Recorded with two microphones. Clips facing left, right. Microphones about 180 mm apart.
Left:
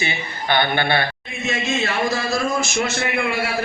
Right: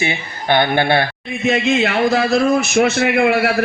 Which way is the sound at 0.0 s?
50° right (ahead or behind).